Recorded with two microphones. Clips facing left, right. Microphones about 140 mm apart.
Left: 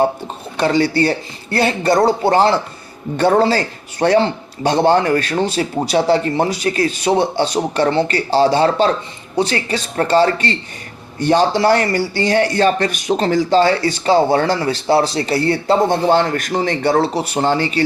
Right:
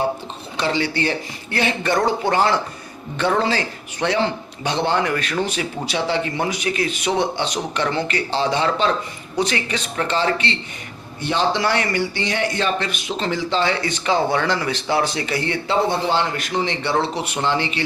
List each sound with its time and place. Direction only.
0.5 s speech: 45° left (ahead or behind)